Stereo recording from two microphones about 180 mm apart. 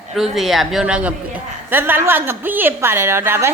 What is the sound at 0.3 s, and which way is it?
A woman's voice, centre (ahead or behind).